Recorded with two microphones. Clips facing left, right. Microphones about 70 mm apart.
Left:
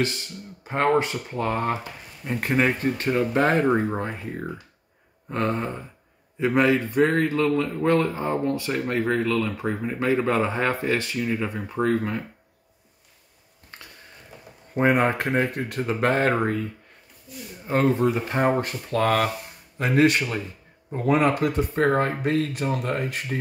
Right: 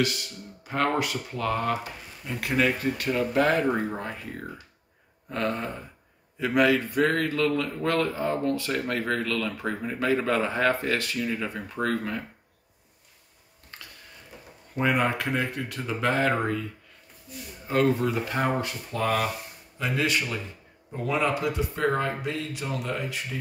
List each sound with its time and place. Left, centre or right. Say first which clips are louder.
0.7 s a man's voice: left 4 dB; left
13.7 s a sound: left 1 dB; left
14.8 s speech: left 4 dB; left
17.6 s speech: left 3 dB; left
18.9 s speech: left 5 dB; left
19.8 s speech: left 7 dB; left